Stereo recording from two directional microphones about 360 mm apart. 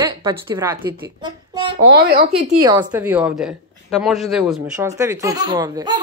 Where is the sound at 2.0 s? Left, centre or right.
Right.